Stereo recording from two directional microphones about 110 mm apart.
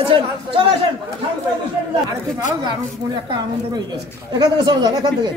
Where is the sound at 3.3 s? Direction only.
40° right (ahead or behind).